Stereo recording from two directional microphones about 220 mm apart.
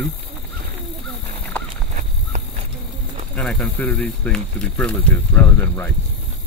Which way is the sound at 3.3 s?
Centre (ahead or behind).